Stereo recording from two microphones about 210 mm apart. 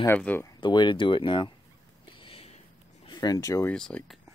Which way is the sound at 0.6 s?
20° left (ahead or behind).